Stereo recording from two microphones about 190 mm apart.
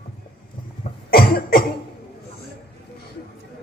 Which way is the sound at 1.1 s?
50° left (ahead or behind).